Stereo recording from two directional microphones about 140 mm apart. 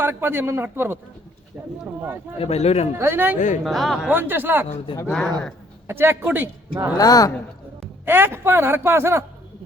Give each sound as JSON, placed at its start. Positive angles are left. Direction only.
{"t": 0.0, "sound": "a man's voice", "side_deg": -15}
{"t": 2.4, "sound": "a man's voice", "side_deg": 50}
{"t": 3.0, "sound": "a man's voice", "side_deg": -15}
{"t": 3.3, "sound": "speech", "side_deg": 65}
{"t": 3.6, "sound": "speech", "side_deg": 0}
{"t": 4.1, "sound": "a man's voice", "side_deg": -15}
{"t": 5.9, "sound": "a man's voice", "side_deg": -15}
{"t": 6.9, "sound": "a woman's voice", "side_deg": 25}
{"t": 8.0, "sound": "a man's voice", "side_deg": -15}